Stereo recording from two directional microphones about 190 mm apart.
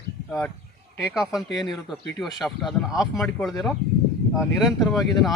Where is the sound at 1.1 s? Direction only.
Centre (ahead or behind).